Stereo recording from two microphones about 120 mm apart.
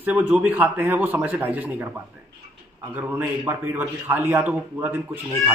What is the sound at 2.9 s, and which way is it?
A man's voice, 15° right (ahead or behind).